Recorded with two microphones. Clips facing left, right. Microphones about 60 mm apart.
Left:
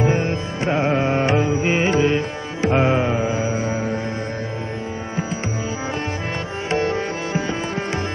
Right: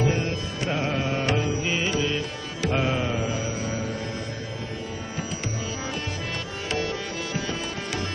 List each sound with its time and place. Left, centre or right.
0.0 s music: left
6.7 s music: left